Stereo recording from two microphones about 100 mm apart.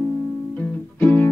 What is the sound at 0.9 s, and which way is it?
Music, 20° left (ahead or behind).